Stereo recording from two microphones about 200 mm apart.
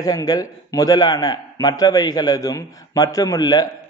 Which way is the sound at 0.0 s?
20° left (ahead or behind).